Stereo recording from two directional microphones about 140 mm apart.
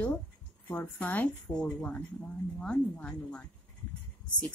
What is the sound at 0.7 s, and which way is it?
A woman's voice, 15° left (ahead or behind).